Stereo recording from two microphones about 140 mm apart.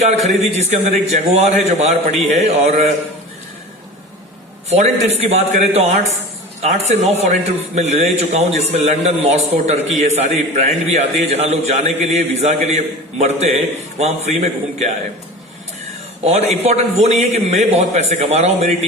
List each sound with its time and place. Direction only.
0.0 s a man's voice: 50° right (ahead or behind)
4.7 s a man's voice: 50° right (ahead or behind)
16.2 s a man's voice: 50° right (ahead or behind)